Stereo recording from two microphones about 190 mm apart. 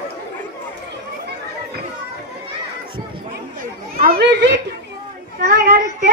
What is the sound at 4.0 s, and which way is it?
A woman's voice, 55° right (ahead or behind).